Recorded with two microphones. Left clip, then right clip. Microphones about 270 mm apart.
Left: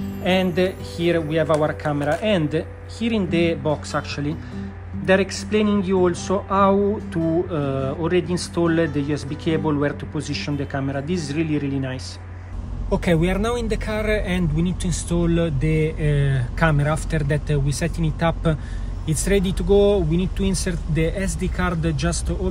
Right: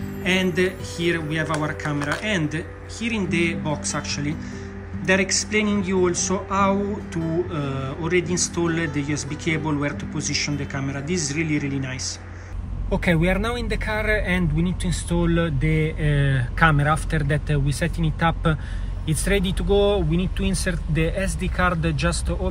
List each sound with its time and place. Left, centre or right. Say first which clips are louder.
0.6 s speech: left 1 dB; centre
12.9 s speech: left 1 dB; centre